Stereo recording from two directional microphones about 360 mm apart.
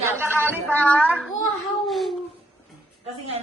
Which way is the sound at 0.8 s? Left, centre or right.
Centre.